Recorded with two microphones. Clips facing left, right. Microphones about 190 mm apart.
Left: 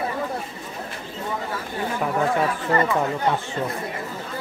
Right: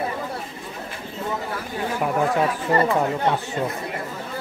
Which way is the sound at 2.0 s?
5° right (ahead or behind).